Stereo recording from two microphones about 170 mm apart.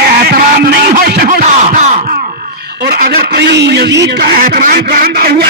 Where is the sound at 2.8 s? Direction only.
75° right (ahead or behind).